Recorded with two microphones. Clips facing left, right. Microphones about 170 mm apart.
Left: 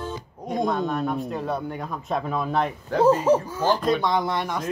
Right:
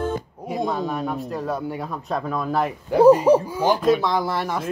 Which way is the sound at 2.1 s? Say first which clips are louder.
Right 1 dB; centre (ahead or behind).